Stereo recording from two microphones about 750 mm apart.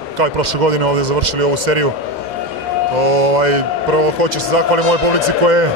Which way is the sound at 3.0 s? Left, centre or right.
Right.